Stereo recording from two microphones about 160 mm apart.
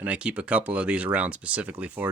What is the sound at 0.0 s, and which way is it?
Speech, 10° right (ahead or behind).